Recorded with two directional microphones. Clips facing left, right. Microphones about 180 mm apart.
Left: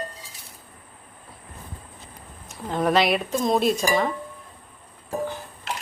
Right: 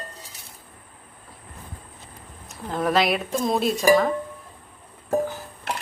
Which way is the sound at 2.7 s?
Centre (ahead or behind).